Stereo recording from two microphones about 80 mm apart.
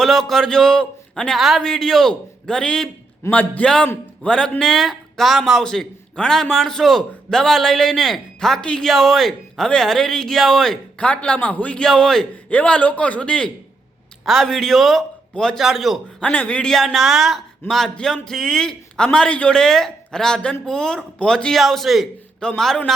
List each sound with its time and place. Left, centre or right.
0.0 s a man's voice: centre
3.2 s a man's voice: centre
10.9 s a man's voice: centre
14.3 s a man's voice: centre
16.2 s a man's voice: centre